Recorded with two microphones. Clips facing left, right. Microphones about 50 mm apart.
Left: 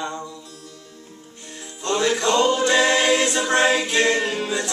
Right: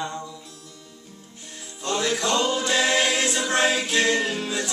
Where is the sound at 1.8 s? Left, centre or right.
Centre.